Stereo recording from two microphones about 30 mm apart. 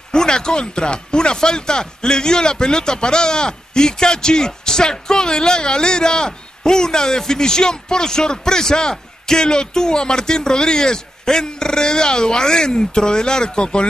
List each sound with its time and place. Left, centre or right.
0.1 s chopping: left